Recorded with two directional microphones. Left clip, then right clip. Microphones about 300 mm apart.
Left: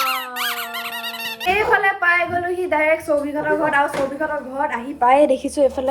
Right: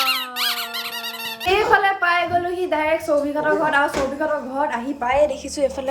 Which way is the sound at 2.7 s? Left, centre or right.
Centre.